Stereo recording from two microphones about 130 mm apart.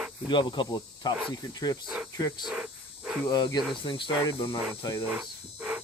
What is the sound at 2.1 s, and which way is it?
Speech, 30° left (ahead or behind).